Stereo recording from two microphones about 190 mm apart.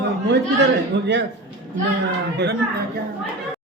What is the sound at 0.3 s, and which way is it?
Speech, 65° right (ahead or behind).